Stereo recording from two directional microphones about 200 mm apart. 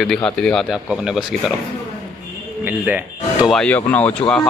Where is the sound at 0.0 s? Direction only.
5° left (ahead or behind).